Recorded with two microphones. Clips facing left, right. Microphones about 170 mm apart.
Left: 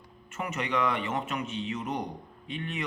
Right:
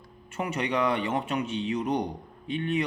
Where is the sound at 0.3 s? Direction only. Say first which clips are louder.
Right 3 dB; 35° right (ahead or behind).